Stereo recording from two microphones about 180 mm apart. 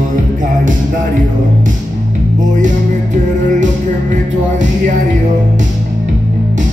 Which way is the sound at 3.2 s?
45° right (ahead or behind).